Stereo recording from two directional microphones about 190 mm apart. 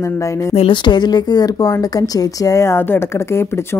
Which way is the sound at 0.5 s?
25° left (ahead or behind).